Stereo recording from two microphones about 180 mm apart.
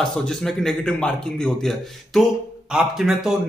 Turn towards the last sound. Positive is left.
turn(degrees=0)  # may be behind; listen again after turning